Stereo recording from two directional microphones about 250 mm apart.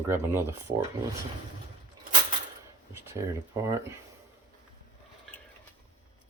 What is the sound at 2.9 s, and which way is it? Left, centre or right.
Speech, centre.